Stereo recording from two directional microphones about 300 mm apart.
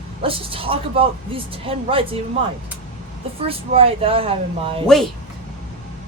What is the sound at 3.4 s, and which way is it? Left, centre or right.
Speech, centre.